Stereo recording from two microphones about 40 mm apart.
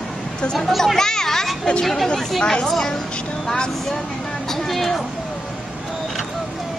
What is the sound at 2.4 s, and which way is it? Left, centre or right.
Speech, left.